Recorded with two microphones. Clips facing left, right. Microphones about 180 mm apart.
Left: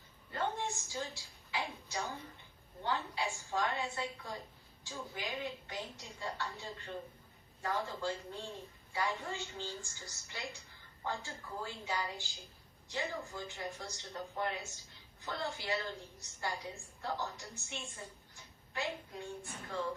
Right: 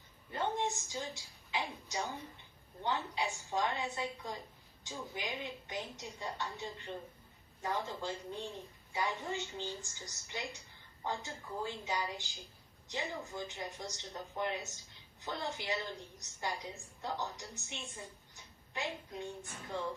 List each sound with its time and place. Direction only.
0.3 s a woman's voice: 20° right (ahead or behind)